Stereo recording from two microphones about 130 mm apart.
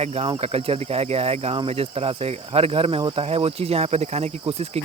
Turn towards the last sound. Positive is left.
turn(degrees=-55)  # may be behind; listen again after turning